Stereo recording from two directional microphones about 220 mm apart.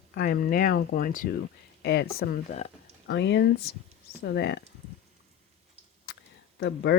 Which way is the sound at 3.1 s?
50° left (ahead or behind).